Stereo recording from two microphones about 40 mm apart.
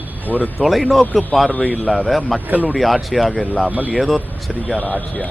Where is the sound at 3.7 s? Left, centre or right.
Right.